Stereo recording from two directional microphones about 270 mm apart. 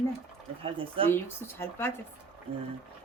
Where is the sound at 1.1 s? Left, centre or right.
Centre.